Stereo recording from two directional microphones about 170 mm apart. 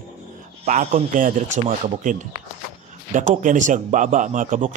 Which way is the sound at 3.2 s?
50° right (ahead or behind).